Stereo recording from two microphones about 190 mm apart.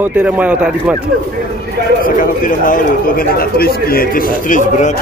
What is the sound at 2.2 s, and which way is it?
Speech, 45° left (ahead or behind).